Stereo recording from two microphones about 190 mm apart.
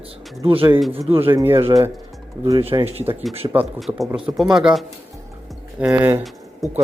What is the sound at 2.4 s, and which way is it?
Speech, 25° right (ahead or behind).